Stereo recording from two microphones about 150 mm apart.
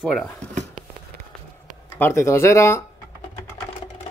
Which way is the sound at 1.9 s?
15° left (ahead or behind).